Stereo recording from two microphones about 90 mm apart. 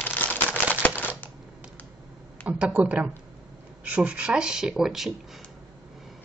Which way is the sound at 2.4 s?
15° right (ahead or behind).